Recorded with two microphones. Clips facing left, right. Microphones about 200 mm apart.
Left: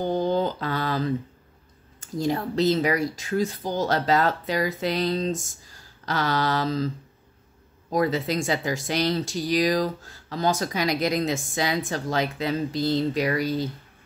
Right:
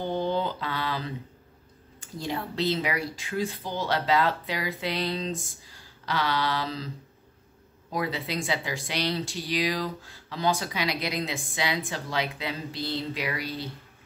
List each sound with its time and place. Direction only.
0.0 s mantra: 40° left (ahead or behind)
2.0 s speech: 40° left (ahead or behind)
7.9 s speech: 45° left (ahead or behind)